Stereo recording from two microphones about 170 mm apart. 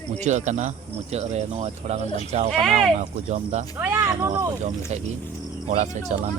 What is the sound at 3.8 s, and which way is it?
Speech, 15° right (ahead or behind).